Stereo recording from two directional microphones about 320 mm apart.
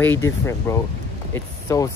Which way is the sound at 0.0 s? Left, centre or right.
Centre.